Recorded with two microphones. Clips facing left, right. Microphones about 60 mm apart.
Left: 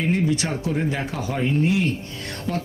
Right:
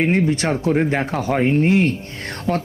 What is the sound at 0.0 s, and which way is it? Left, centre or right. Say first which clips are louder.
Speech: right 4 dB; right.